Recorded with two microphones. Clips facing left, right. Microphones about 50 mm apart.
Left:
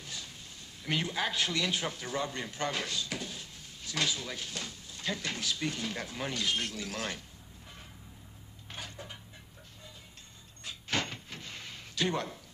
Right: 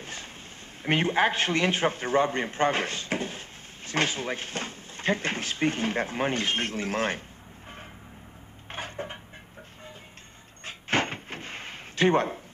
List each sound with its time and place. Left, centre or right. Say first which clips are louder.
0.0 s a sound: right 5 dB; right
0.8 s a man's voice: right 9 dB; right
8.6 s cupboard open or close: right 9 dB; right
10.6 s door: right 7 dB; right